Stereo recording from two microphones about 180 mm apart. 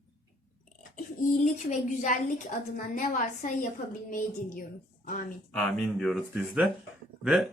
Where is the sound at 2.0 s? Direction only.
45° left (ahead or behind).